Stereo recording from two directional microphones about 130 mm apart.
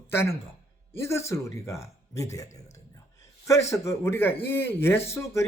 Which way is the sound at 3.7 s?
20° left (ahead or behind).